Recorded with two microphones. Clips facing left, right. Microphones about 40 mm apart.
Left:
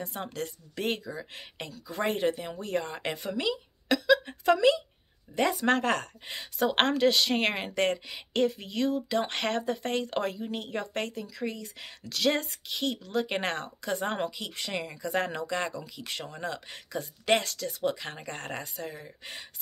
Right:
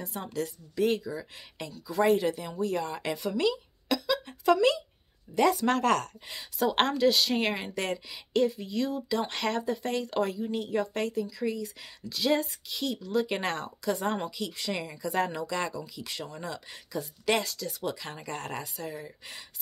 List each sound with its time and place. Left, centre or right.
0.0 s speech: left
3.3 s speech: left
6.9 s a woman's voice: left
14.7 s speech: left
15.0 s speech: left